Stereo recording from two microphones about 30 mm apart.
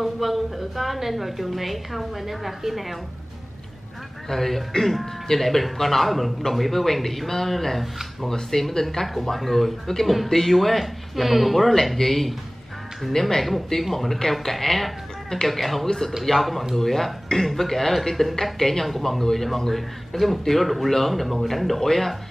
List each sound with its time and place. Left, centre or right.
0.0 s a woman's voice: centre
4.3 s a woman's voice: centre
13.2 s speech: centre
13.7 s a woman's voice: centre